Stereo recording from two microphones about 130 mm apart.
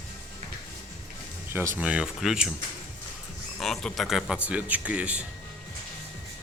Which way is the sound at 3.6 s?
5° left (ahead or behind).